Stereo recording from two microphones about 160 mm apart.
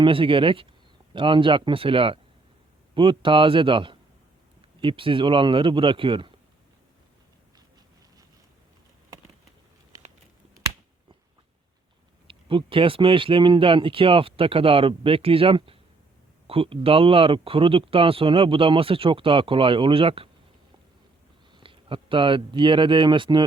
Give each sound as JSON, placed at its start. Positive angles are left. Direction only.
{"t": 0.0, "sound": "speech", "side_deg": -35}
{"t": 9.9, "sound": "a sound", "side_deg": -20}
{"t": 12.3, "sound": "speech", "side_deg": -35}
{"t": 21.5, "sound": "speech", "side_deg": -35}